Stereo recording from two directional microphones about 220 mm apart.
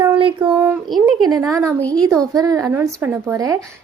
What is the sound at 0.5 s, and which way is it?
Speech, 5° right (ahead or behind).